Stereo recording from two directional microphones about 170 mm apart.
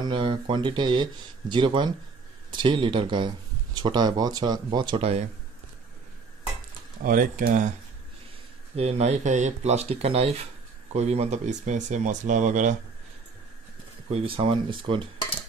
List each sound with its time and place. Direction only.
0.0 s speech: 30° right (ahead or behind)
7.0 s speech: 55° right (ahead or behind)
8.7 s speech: 40° right (ahead or behind)
14.1 s speech: 35° right (ahead or behind)